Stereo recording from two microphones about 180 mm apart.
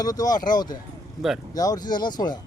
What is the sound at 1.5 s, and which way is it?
Speech, 20° left (ahead or behind).